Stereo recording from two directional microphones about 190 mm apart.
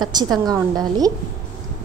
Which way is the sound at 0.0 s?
20° right (ahead or behind).